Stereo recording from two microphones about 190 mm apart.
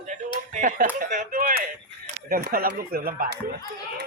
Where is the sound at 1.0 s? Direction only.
45° right (ahead or behind).